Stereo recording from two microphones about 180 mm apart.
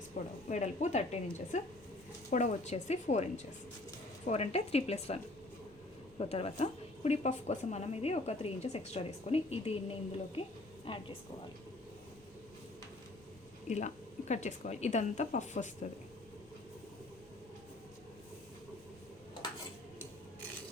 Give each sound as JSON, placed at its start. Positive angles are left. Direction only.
{"t": 0.1, "sound": "a woman's voice", "side_deg": 50}
{"t": 13.7, "sound": "a woman's voice", "side_deg": 40}